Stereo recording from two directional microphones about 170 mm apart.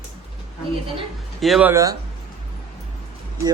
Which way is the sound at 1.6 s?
20° right (ahead or behind).